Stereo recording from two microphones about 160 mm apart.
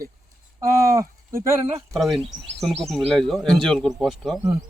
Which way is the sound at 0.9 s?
20° right (ahead or behind).